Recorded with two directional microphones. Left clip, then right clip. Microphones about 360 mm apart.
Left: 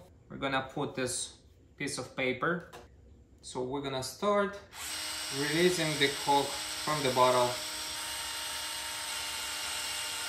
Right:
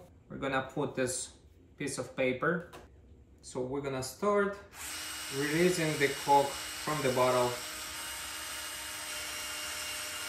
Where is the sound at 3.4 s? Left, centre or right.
Centre.